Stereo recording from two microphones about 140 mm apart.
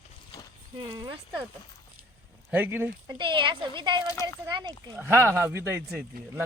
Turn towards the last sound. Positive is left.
turn(degrees=-15)  # may be behind; listen again after turning